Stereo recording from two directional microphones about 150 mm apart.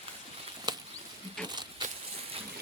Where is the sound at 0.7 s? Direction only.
30° right (ahead or behind).